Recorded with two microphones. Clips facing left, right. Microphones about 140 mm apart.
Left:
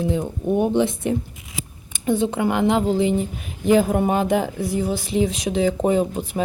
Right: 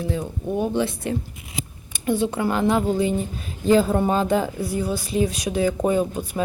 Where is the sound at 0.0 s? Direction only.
20° left (ahead or behind).